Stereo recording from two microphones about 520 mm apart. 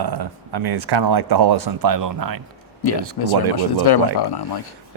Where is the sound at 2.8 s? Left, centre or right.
Left.